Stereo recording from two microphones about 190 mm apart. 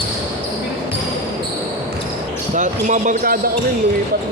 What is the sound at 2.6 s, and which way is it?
Speech, 40° right (ahead or behind).